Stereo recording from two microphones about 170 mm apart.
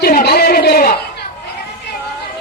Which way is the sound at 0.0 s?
65° left (ahead or behind).